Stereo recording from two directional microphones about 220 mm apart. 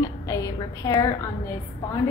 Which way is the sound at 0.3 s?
15° left (ahead or behind).